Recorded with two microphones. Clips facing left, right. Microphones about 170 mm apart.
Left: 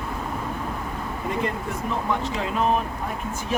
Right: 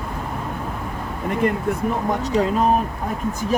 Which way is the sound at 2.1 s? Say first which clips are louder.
Right 8 dB; 40° right (ahead or behind).